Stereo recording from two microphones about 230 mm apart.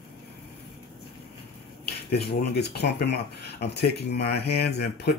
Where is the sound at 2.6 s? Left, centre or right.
Left.